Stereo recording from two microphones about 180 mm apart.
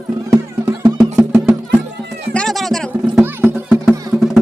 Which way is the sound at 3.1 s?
10° right (ahead or behind).